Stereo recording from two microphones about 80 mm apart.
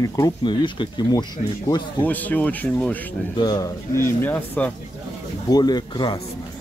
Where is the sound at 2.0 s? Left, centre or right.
Left.